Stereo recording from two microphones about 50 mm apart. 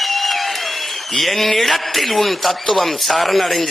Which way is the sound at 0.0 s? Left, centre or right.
Centre.